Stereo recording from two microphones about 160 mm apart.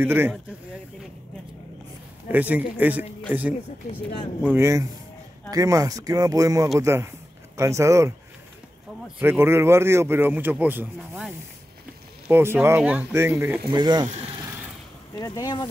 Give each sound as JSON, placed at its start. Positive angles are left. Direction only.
{"t": 0.0, "sound": "speech", "side_deg": -15}
{"t": 2.2, "sound": "speech", "side_deg": -10}
{"t": 4.4, "sound": "speech", "side_deg": -15}
{"t": 9.2, "sound": "speech", "side_deg": -15}
{"t": 13.7, "sound": "speech", "side_deg": -25}
{"t": 15.1, "sound": "speech", "side_deg": 25}